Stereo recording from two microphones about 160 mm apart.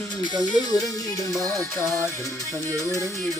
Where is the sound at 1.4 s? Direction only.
20° left (ahead or behind).